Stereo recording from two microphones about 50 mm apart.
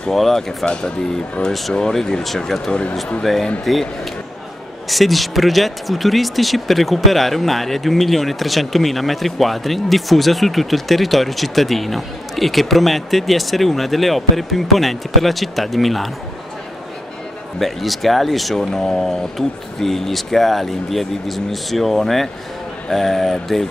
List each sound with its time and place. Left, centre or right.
0.1 s speech: centre
0.7 s speech: centre
4.8 s speech: centre
17.6 s speech: centre